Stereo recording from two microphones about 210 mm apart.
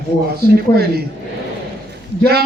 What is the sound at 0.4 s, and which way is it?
Speech, 50° right (ahead or behind).